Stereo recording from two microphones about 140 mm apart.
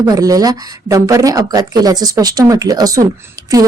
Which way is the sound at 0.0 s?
25° right (ahead or behind).